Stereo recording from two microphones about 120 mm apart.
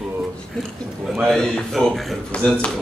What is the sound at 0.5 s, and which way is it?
Speech, 5° left (ahead or behind).